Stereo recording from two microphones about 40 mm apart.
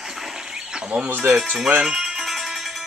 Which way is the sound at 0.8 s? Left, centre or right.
Right.